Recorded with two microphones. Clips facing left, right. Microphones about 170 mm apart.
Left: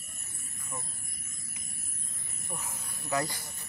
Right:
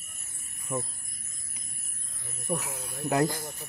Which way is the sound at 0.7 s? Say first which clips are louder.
Right 11 dB; 75° right (ahead or behind).